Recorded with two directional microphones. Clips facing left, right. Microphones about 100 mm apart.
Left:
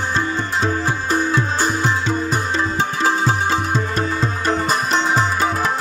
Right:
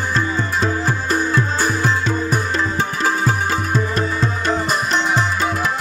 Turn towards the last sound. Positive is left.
turn(degrees=35)  # may be behind; listen again after turning